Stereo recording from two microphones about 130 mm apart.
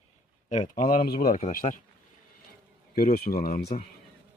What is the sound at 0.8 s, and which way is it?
Speech, 90° left.